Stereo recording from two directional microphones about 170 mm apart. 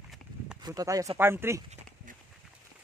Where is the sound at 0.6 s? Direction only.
20° right (ahead or behind).